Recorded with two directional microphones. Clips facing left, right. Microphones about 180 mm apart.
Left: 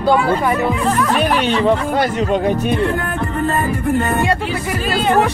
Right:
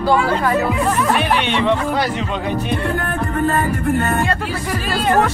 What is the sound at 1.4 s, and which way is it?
Speech, 40° left (ahead or behind).